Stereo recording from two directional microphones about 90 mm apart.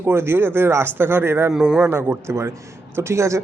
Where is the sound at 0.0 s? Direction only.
25° right (ahead or behind).